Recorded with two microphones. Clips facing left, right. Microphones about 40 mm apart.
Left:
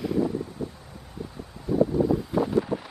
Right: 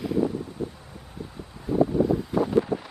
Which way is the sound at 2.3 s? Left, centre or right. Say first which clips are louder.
Right 1 dB; centre.